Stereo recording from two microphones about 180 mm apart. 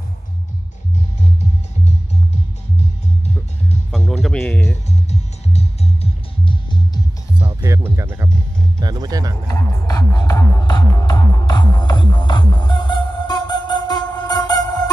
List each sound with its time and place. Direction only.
3.9 s music: centre (ahead or behind)
5.1 s music: 35° left (ahead or behind)
6.4 s music: 25° left (ahead or behind)
7.3 s speech: 20° right (ahead or behind)
9.5 s music: 20° left (ahead or behind)